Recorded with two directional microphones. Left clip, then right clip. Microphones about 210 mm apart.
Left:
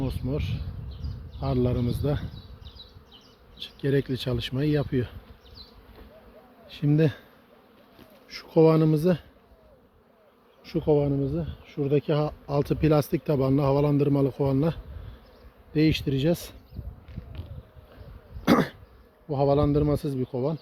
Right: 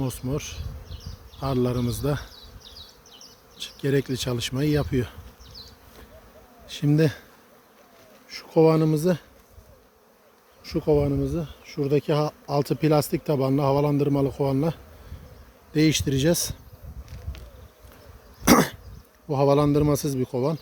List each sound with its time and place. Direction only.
0.0 s speech: 15° right (ahead or behind)
2.6 s bee: 60° right (ahead or behind)
3.6 s speech: 15° right (ahead or behind)
6.7 s speech: 15° right (ahead or behind)
8.3 s speech: centre (ahead or behind)
10.6 s speech: 5° right (ahead or behind)
15.7 s speech: 20° right (ahead or behind)
18.4 s cough: 30° right (ahead or behind)
19.3 s a man's voice: 35° right (ahead or behind)